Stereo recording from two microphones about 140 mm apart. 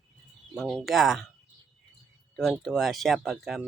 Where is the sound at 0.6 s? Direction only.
5° left (ahead or behind).